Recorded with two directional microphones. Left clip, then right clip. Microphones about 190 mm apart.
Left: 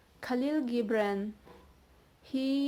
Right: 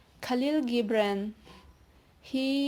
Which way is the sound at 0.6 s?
25° right (ahead or behind).